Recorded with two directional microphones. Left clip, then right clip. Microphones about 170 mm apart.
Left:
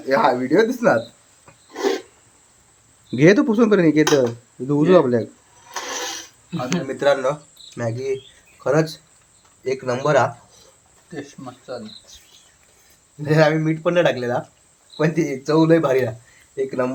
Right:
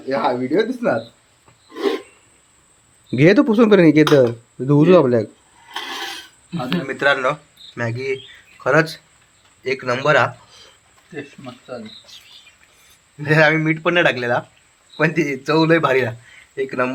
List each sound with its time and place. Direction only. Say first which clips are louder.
0.1 s a man's voice: left 2 dB; 15° left (ahead or behind)
3.1 s speech: right 1 dB; 15° right (ahead or behind)
6.8 s a man's voice: right 1 dB; 10° left (ahead or behind)
13.2 s a man's voice: right 2 dB; centre (ahead or behind)